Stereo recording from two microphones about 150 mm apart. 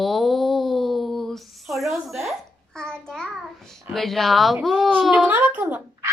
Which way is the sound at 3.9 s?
Centre (ahead or behind).